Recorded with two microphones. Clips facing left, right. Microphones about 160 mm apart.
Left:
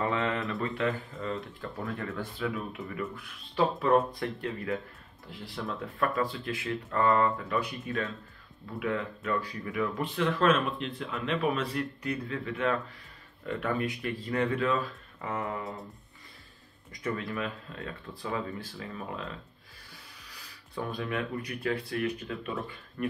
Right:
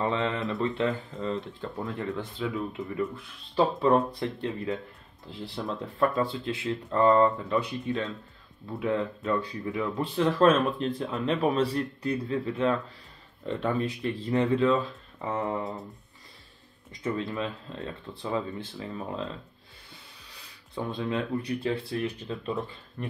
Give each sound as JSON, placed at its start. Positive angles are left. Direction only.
{"t": 0.0, "sound": "speech", "side_deg": -20}
{"t": 15.6, "sound": "music", "side_deg": 0}
{"t": 16.9, "sound": "speech", "side_deg": -25}
{"t": 20.2, "sound": "speech", "side_deg": -25}